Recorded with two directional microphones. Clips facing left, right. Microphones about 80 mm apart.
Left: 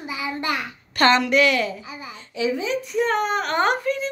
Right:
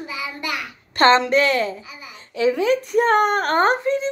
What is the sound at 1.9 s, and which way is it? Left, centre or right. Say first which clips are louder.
Babbling: left 4 dB; left.